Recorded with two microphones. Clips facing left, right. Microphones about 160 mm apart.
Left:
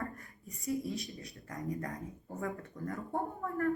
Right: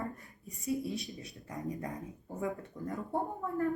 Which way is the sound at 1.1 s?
20° right (ahead or behind).